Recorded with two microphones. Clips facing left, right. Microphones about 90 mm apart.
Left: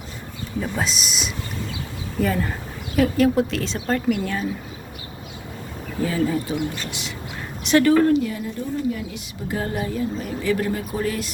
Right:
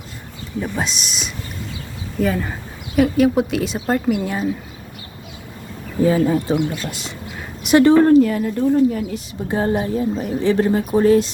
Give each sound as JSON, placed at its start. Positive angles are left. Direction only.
{"t": 0.6, "sound": "speech", "side_deg": 0}
{"t": 6.0, "sound": "speech", "side_deg": -30}
{"t": 6.2, "sound": "a woman's voice", "side_deg": -45}
{"t": 7.8, "sound": "speech", "side_deg": -25}
{"t": 8.0, "sound": "a woman's voice", "side_deg": -40}
{"t": 8.3, "sound": "speech", "side_deg": -55}
{"t": 9.1, "sound": "a woman's voice", "side_deg": -30}